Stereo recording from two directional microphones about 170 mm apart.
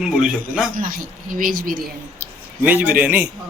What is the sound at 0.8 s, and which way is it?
Speech, 55° right (ahead or behind).